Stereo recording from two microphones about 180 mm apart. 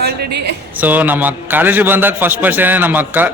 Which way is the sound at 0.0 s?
65° right (ahead or behind).